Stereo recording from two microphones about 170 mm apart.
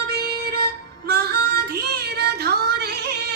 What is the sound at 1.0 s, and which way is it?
Child singing, 70° right (ahead or behind).